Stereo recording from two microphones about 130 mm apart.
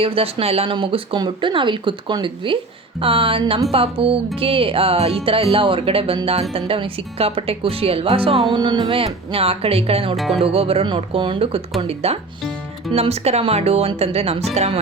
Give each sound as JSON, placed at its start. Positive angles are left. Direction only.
{"t": 0.0, "sound": "speech", "side_deg": -45}
{"t": 8.5, "sound": "speech", "side_deg": -35}